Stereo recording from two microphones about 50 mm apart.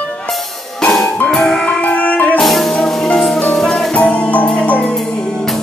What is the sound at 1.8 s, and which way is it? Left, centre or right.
Music, left.